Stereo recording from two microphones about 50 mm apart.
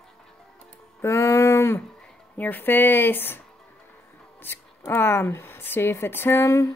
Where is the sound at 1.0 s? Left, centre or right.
Left.